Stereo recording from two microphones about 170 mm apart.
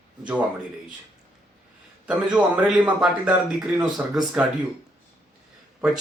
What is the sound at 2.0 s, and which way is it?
A man's voice, 5° right (ahead or behind).